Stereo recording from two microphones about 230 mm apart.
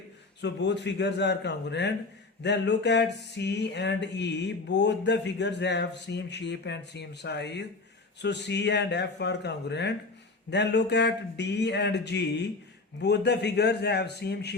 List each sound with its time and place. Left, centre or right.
0.4 s speech: left